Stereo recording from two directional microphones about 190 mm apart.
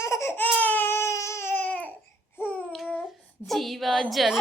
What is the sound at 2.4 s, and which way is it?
Babbling, 10° left (ahead or behind).